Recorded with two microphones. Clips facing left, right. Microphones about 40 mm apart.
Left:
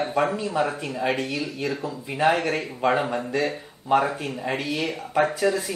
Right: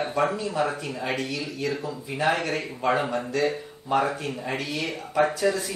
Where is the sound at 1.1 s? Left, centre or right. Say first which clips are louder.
Left 2 dB; centre.